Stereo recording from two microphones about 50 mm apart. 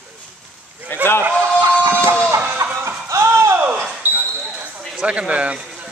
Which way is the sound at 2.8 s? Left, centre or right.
Right.